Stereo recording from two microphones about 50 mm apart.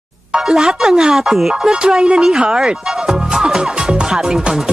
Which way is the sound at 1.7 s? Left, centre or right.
Centre.